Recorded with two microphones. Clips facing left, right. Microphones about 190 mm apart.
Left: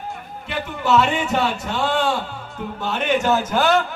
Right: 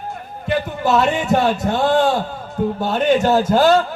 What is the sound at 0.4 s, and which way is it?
A man's voice, 40° right (ahead or behind).